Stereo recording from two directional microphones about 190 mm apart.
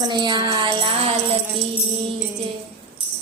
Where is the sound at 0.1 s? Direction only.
25° right (ahead or behind).